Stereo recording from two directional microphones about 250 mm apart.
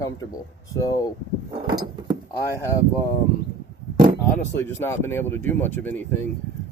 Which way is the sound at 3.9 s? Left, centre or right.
Right.